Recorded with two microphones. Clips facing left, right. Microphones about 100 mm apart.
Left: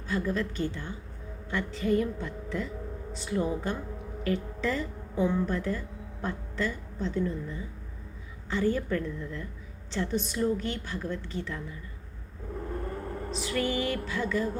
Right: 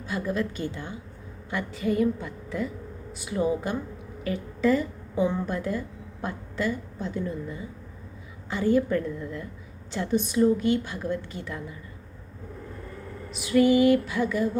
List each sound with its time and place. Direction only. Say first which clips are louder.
0.1 s a woman's voice: right 1 dB; 15° right (ahead or behind)
12.7 s vehicle: left 5 dB; 45° left (ahead or behind)
13.3 s a woman's voice: right 10 dB; 15° right (ahead or behind)